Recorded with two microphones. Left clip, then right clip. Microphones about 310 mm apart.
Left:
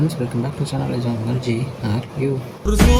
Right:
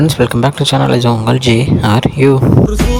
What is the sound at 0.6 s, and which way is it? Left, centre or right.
Speech, right.